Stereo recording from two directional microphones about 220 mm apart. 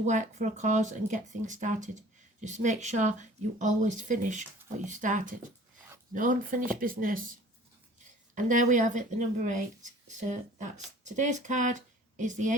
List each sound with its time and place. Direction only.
0.0 s speech: 35° right (ahead or behind)
8.4 s speech: 35° right (ahead or behind)